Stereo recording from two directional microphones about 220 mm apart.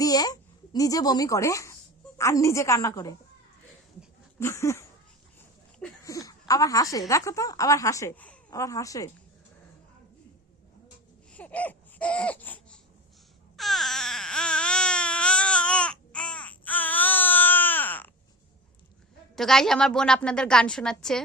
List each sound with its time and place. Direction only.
0.0 s a child's voice: 15° left (ahead or behind)
4.4 s a sound: 10° left (ahead or behind)
6.5 s a woman's voice: 15° left (ahead or behind)
11.3 s a sound: 5° left (ahead or behind)
13.6 s baby cry: centre (ahead or behind)
19.4 s a woman's voice: centre (ahead or behind)